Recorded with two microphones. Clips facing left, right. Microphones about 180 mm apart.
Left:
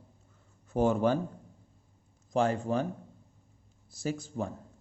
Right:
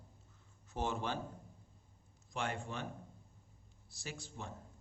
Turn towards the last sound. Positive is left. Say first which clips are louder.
# left 14 dB
turn(degrees=40)  # may be behind; listen again after turning